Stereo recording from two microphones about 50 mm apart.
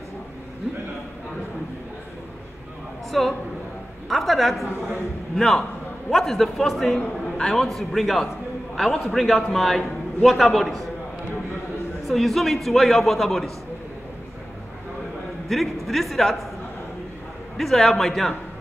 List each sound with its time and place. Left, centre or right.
3.1 s a man's voice: centre
7.0 s a man's voice: centre
12.1 s a man's voice: centre
15.4 s a man's voice: centre
17.6 s a man's voice: centre